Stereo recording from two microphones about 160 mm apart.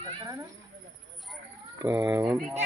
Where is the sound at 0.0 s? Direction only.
20° right (ahead or behind).